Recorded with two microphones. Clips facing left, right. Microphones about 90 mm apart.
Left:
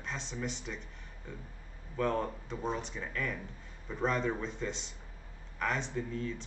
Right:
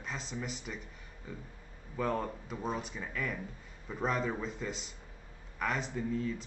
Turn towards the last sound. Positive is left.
turn(degrees=-5)  # may be behind; listen again after turning